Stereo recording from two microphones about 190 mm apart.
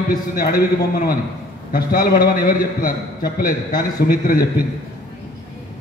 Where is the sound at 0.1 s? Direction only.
50° left (ahead or behind).